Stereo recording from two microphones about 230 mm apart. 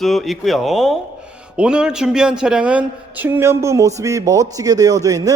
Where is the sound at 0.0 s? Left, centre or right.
Centre.